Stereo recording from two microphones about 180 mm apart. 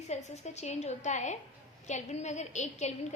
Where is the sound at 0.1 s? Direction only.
40° left (ahead or behind).